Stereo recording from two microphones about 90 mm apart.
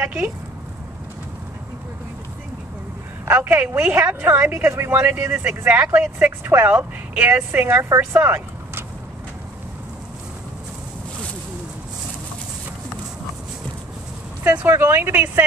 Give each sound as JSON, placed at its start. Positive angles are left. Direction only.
{"t": 0.0, "sound": "speech", "side_deg": -20}
{"t": 3.3, "sound": "speech", "side_deg": -20}
{"t": 14.4, "sound": "speech", "side_deg": -20}